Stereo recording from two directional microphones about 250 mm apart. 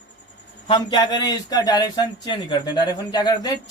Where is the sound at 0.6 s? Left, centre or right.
Centre.